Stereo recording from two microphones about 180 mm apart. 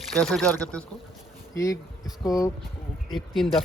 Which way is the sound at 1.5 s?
15° left (ahead or behind).